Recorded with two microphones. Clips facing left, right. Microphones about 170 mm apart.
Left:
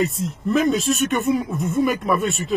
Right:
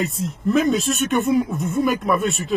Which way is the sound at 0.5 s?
Centre (ahead or behind).